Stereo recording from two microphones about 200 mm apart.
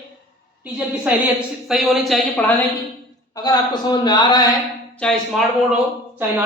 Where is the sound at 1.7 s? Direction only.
Centre (ahead or behind); by 4.5 s 20° left (ahead or behind).